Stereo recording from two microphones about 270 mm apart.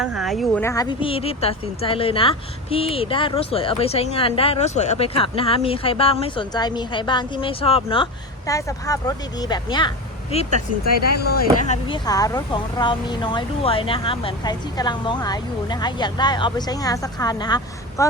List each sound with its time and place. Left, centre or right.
0.0 s a woman's voice: centre; by 10.5 s left
11.1 s speech: left
11.7 s speech: centre